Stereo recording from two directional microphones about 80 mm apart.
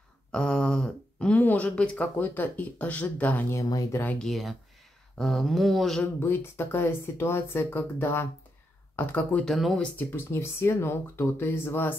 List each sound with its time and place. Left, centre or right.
0.3 s a sound: centre
1.4 s speech: centre
3.4 s speech: left
4.2 s speech: centre
6.1 s speech: left
9.4 s speech: centre
9.9 s speech: left